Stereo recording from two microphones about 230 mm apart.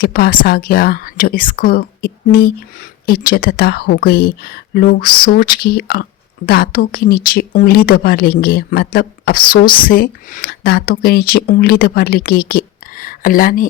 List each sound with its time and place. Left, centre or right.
0.0 s speech: left